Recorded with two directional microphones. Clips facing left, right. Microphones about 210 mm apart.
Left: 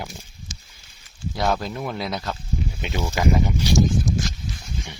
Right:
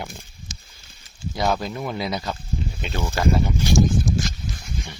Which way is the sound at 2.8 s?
15° left (ahead or behind).